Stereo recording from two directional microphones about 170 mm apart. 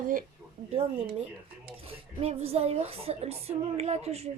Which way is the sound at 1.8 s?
40° right (ahead or behind).